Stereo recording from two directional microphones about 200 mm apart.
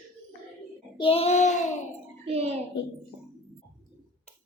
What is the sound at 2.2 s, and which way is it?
Speech, 30° right (ahead or behind).